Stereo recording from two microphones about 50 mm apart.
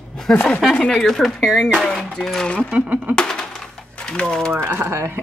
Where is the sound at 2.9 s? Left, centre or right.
Right.